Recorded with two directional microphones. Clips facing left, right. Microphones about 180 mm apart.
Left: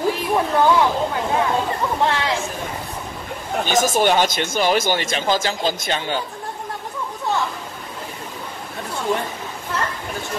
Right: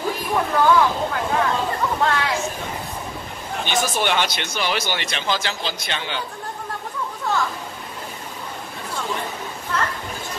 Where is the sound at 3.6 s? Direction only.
45° left (ahead or behind).